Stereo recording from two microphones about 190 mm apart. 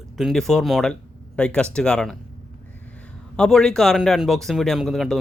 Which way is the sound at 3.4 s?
5° left (ahead or behind).